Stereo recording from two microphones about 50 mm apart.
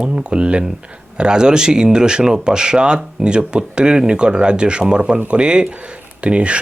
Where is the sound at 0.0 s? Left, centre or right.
Centre.